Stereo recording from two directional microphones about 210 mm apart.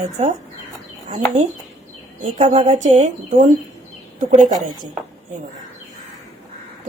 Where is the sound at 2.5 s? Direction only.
35° right (ahead or behind).